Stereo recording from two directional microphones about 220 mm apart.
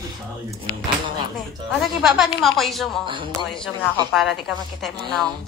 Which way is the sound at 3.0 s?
20° right (ahead or behind).